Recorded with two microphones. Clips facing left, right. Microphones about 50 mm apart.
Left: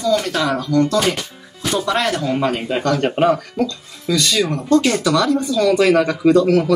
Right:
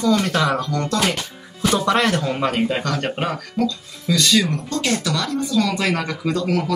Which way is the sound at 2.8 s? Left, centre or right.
Centre.